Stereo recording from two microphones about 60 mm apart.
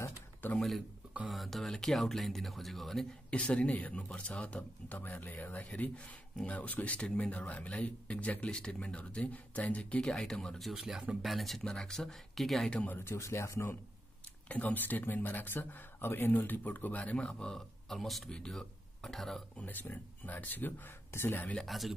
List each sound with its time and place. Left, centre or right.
0.6 s speech: centre
3.3 s speech: centre
10.7 s speech: centre
11.6 s speech: centre
12.8 s speech: left
13.2 s speech: left
14.5 s speech: left; by 19.4 s centre
19.5 s speech: left
21.6 s speech: centre